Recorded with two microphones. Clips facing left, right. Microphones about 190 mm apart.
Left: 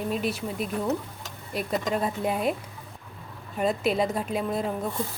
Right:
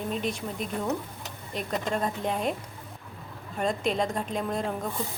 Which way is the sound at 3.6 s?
5° left (ahead or behind).